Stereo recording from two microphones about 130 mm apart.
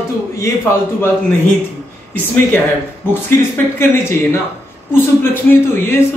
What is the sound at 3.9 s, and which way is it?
A woman's voice, 20° left (ahead or behind).